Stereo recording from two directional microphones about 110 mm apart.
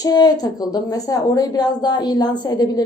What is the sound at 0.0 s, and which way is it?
Speech, 35° left (ahead or behind).